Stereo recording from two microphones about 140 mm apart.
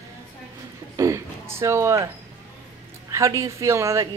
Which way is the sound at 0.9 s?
20° right (ahead or behind).